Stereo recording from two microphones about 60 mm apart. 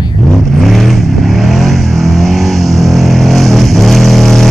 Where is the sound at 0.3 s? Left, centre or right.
Centre.